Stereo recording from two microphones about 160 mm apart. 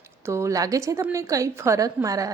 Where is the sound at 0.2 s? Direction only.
15° right (ahead or behind).